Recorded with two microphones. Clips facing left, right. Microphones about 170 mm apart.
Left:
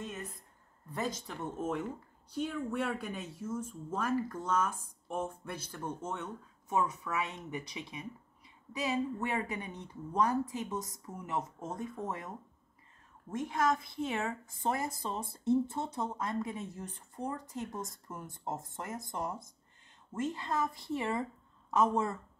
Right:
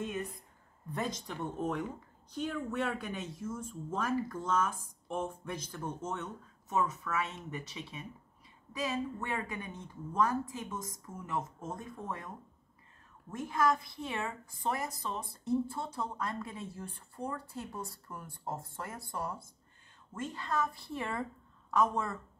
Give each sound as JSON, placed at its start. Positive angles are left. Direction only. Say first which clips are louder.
{"t": 0.0, "sound": "a woman's voice", "louder": "right 5 dB", "side_deg": 0}
{"t": 13.6, "sound": "a woman's voice", "louder": "right 1 dB", "side_deg": 25}